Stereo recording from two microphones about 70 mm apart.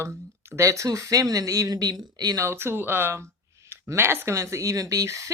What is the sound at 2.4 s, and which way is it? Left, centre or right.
Speech, right.